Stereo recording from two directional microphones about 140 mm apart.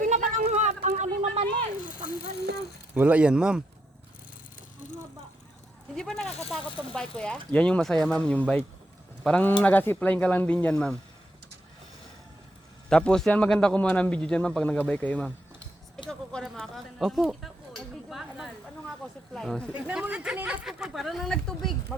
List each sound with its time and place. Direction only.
0.0 s a sound: 65° right (ahead or behind)
2.9 s speech: 10° right (ahead or behind)
5.9 s a man's voice: 5° left (ahead or behind)
12.9 s a man's voice: 5° left (ahead or behind)
16.0 s a sound: 5° left (ahead or behind)
19.3 s speech: 5° left (ahead or behind)
19.7 s speech: 10° right (ahead or behind)